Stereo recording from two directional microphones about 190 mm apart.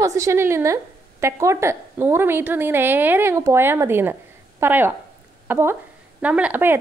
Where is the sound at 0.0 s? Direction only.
15° right (ahead or behind).